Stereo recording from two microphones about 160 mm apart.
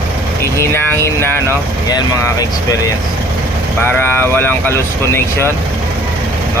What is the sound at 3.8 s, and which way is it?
Speech, 15° left (ahead or behind).